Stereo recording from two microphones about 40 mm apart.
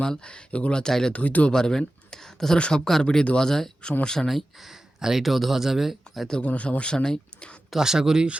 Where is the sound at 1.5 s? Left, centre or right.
Centre.